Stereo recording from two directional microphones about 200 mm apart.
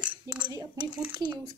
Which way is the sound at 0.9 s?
5° right (ahead or behind).